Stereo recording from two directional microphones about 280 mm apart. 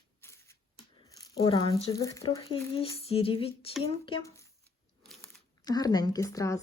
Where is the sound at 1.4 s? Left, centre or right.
Centre.